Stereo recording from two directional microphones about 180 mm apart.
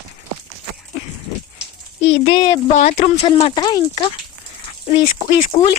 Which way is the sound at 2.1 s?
30° left (ahead or behind).